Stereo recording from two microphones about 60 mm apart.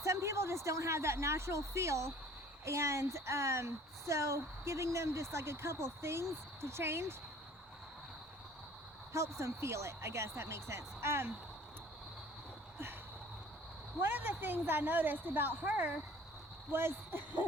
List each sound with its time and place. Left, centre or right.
0.0 s speech: right
9.1 s speech: right
14.0 s speech: right